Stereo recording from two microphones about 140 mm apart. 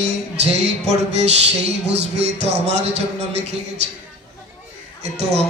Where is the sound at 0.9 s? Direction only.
50° right (ahead or behind).